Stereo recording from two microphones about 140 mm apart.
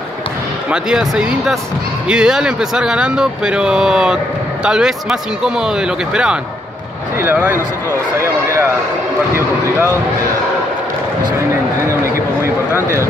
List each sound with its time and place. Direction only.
0.7 s a man's voice: 5° right (ahead or behind)
11.8 s speech: 20° right (ahead or behind)